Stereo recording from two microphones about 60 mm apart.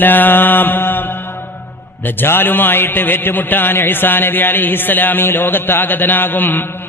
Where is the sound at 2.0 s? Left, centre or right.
Left.